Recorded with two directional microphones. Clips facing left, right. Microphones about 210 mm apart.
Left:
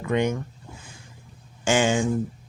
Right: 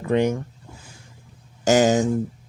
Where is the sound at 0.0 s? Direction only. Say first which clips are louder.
Right 3 dB; 35° right (ahead or behind).